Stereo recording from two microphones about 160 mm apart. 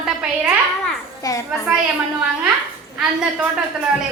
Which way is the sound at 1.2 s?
20° left (ahead or behind).